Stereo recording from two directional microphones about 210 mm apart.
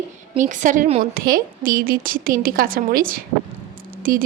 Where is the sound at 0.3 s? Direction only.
35° right (ahead or behind).